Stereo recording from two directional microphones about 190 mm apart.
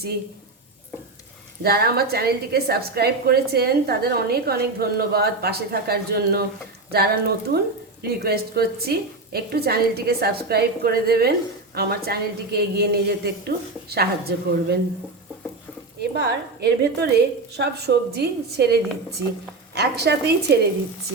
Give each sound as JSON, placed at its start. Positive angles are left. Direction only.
{"t": 1.6, "sound": "a woman's voice", "side_deg": -55}
{"t": 16.0, "sound": "a woman's voice", "side_deg": -60}